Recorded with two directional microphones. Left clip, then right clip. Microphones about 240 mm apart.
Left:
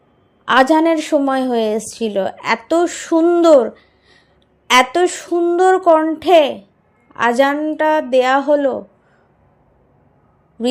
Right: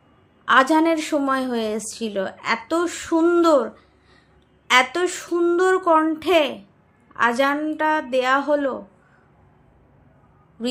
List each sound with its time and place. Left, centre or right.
0.4 s a woman's voice: left